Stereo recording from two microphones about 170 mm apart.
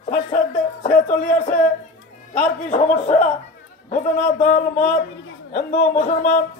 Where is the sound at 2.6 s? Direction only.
45° left (ahead or behind).